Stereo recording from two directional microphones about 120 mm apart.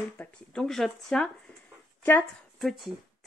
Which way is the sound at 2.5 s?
Centre (ahead or behind).